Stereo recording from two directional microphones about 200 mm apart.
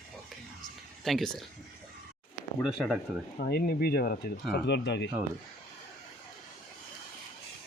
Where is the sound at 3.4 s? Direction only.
50° left (ahead or behind).